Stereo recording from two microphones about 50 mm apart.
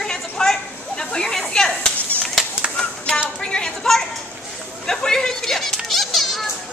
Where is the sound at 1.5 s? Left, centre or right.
Centre.